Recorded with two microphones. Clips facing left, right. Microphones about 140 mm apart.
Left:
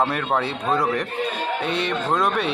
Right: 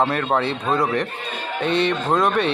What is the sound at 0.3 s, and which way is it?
Speech, 5° left (ahead or behind).